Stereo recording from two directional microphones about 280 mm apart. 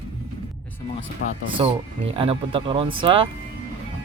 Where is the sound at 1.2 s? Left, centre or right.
Left.